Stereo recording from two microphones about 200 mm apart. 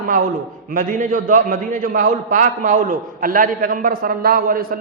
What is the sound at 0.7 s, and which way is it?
A man's voice, 40° right (ahead or behind).